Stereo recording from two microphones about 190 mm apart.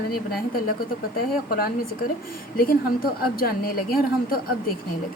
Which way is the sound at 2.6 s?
50° left (ahead or behind).